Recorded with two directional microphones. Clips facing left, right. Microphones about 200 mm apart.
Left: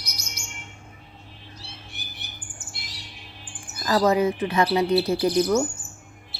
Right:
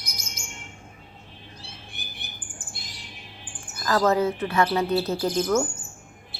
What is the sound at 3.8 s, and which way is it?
Speech, 15° left (ahead or behind).